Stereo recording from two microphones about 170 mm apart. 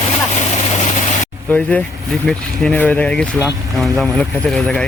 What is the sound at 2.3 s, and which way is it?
Speech, 5° left (ahead or behind).